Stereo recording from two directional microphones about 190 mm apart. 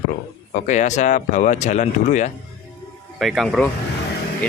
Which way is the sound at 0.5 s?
40° left (ahead or behind).